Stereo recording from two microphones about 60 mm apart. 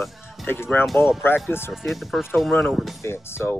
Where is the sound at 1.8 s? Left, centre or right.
Centre.